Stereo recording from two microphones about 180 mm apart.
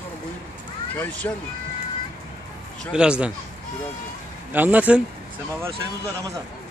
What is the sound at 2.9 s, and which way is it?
Speech, 5° right (ahead or behind).